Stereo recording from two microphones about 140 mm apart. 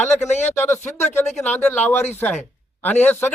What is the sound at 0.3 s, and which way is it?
Speech, 55° left (ahead or behind).